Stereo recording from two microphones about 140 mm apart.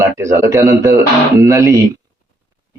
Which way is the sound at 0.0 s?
20° right (ahead or behind).